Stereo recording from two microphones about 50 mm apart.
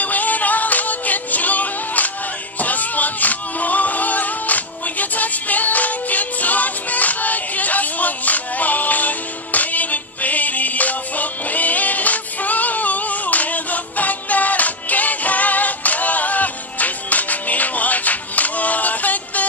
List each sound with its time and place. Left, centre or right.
0.0 s music: left